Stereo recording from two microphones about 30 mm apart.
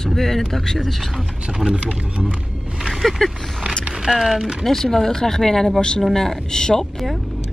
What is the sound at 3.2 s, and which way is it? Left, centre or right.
Speech, centre.